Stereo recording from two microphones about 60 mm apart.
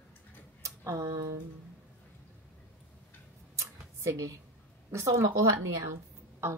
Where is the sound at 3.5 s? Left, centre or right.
Right.